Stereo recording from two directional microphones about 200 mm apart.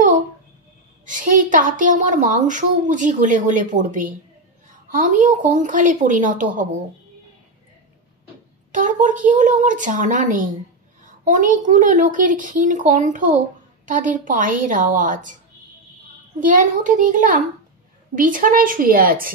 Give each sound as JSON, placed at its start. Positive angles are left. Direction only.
{"t": 1.0, "sound": "a woman's voice", "side_deg": -40}
{"t": 8.7, "sound": "a woman's voice", "side_deg": -40}
{"t": 16.3, "sound": "a woman's voice", "side_deg": -40}